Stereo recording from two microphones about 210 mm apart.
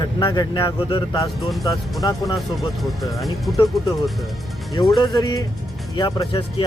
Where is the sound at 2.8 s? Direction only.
Centre (ahead or behind).